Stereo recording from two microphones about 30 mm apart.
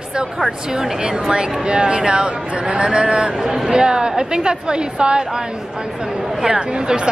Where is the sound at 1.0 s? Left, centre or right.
Right.